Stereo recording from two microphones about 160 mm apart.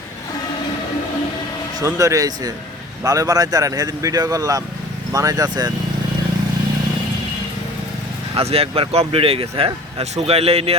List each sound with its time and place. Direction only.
1.8 s speech: 20° right (ahead or behind)
8.4 s speech: 40° right (ahead or behind)